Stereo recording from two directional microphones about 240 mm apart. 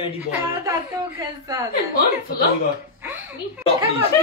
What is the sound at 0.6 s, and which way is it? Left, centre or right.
A woman's voice, centre.